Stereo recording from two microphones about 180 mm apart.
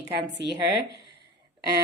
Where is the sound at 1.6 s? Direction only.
60° right (ahead or behind).